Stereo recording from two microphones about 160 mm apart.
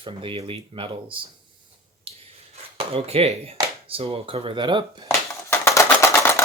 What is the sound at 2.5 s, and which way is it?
Chopping, 40° right (ahead or behind).